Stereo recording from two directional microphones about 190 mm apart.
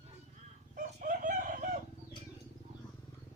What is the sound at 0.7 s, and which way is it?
Chicken, 45° right (ahead or behind).